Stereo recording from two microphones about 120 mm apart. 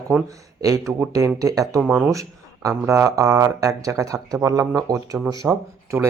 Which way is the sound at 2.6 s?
25° right (ahead or behind).